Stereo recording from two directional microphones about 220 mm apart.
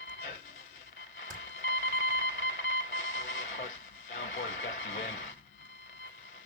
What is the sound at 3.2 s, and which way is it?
Vehicle, 60° left (ahead or behind).